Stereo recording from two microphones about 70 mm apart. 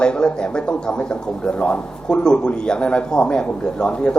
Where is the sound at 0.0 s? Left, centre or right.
Centre.